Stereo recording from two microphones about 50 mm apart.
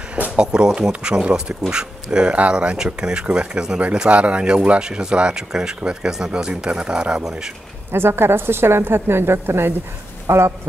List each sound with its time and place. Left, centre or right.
0.4 s speech: centre
7.9 s a woman's voice: right
10.2 s speech: right